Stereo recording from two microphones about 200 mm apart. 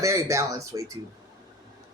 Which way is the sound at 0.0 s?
15° right (ahead or behind).